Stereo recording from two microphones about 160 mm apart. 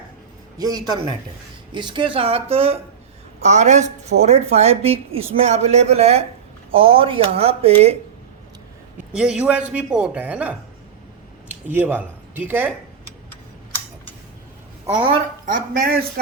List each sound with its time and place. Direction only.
0.6 s a man's voice: 25° right (ahead or behind); by 7.9 s 40° right (ahead or behind)
9.1 s speech: 5° right (ahead or behind)
15.4 s speech: 60° right (ahead or behind)